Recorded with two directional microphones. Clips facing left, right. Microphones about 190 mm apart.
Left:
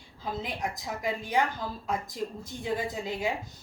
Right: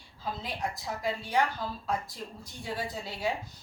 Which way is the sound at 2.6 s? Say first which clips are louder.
Left 4 dB; 15° left (ahead or behind).